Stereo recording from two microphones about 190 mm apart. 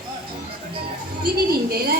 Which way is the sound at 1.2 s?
55° right (ahead or behind).